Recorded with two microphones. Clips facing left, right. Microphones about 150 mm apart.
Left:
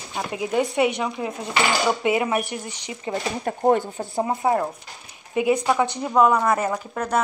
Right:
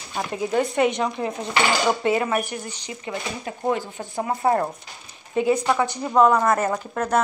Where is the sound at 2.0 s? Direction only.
20° left (ahead or behind).